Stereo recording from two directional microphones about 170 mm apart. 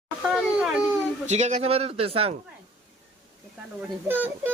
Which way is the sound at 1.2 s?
45° right (ahead or behind).